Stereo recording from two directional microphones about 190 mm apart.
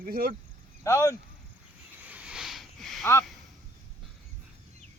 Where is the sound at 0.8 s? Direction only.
15° left (ahead or behind).